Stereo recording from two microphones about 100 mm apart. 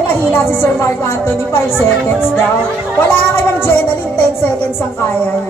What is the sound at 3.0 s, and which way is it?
Speech, 25° left (ahead or behind).